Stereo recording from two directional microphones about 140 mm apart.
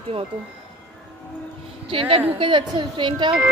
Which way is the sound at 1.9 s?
40° right (ahead or behind).